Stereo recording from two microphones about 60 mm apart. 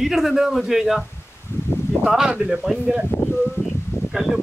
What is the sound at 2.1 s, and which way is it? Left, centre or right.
Speech, centre.